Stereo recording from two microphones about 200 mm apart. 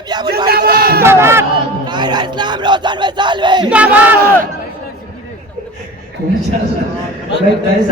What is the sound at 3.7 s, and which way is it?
Speech, 5° right (ahead or behind).